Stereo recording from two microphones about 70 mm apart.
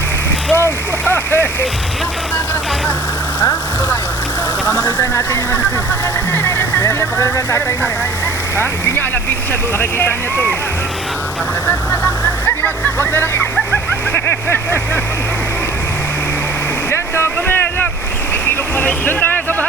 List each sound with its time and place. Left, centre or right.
0.5 s a sound: left
4.6 s speech: left
9.7 s speech: left
11.6 s speech: left
16.9 s boat: left
19.0 s speech: left